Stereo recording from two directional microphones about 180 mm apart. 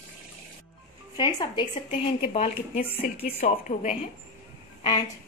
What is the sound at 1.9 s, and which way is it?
Speech, 35° left (ahead or behind).